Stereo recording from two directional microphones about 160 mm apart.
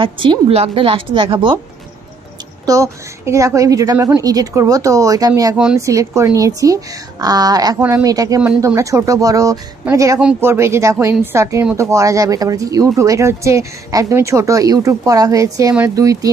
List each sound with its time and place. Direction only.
0.0 s a woman's voice: 30° right (ahead or behind)
2.6 s speech: 20° right (ahead or behind)
5.5 s speech: 5° right (ahead or behind)
5.8 s speech: 20° right (ahead or behind)